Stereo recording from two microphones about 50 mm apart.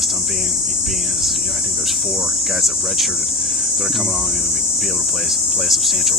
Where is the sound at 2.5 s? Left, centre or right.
Centre.